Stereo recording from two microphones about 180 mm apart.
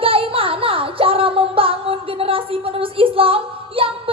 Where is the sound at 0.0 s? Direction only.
30° right (ahead or behind).